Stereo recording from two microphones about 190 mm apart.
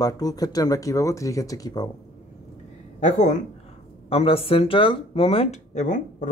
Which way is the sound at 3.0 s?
40° left (ahead or behind).